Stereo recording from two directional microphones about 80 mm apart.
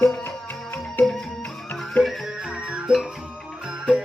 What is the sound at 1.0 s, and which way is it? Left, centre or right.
Music, left.